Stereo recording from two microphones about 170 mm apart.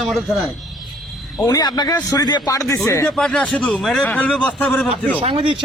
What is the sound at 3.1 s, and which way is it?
Speech, 5° left (ahead or behind).